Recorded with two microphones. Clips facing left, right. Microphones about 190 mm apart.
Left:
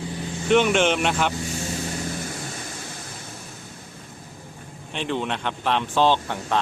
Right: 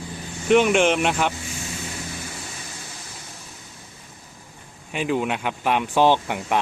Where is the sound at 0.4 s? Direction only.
Centre (ahead or behind).